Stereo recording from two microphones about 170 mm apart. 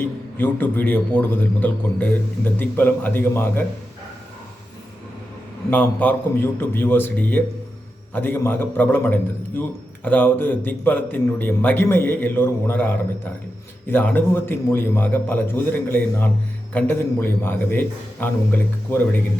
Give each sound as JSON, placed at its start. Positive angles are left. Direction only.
{"t": 0.3, "sound": "a man's voice", "side_deg": 10}
{"t": 5.7, "sound": "a man's voice", "side_deg": 10}